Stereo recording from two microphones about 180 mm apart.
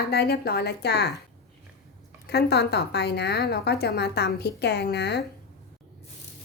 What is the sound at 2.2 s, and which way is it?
A woman's voice, 65° left (ahead or behind).